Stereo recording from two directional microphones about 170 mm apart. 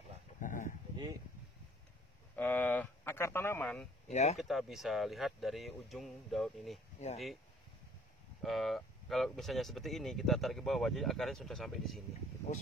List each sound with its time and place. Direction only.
0.4 s a sound: 50° left (ahead or behind)
2.3 s a sound: 10° left (ahead or behind)
4.1 s speech: 40° left (ahead or behind)
4.4 s speech: centre (ahead or behind)
7.0 s speech: 40° left (ahead or behind)
8.4 s speech: centre (ahead or behind)